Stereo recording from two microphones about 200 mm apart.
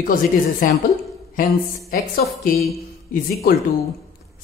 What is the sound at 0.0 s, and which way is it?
Speech, 45° left (ahead or behind).